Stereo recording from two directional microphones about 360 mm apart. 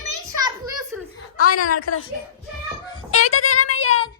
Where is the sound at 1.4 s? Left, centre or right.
Left.